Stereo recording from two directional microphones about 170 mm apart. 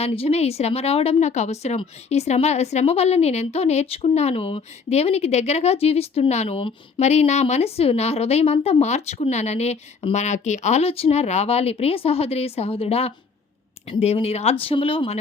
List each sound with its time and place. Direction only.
0.0 s speech: 35° left (ahead or behind)